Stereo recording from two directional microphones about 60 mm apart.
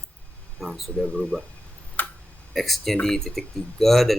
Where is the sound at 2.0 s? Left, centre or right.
Left.